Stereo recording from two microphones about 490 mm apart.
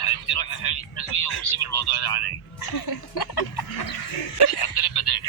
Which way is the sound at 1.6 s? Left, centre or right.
Left.